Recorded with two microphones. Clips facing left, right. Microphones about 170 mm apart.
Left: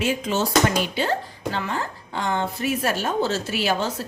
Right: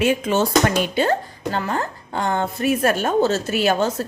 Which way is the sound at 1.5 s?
45° right (ahead or behind).